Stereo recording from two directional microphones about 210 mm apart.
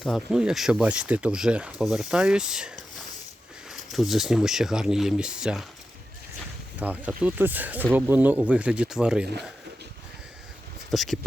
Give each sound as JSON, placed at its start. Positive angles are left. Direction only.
{"t": 0.0, "sound": "speech", "side_deg": 0}
{"t": 6.7, "sound": "speech", "side_deg": -5}
{"t": 10.9, "sound": "speech", "side_deg": 0}